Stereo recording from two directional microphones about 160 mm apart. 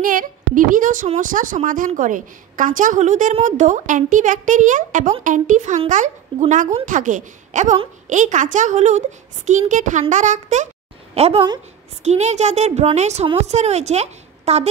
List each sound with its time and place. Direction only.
0.0 s a woman's voice: 60° right (ahead or behind); by 14.7 s 45° right (ahead or behind)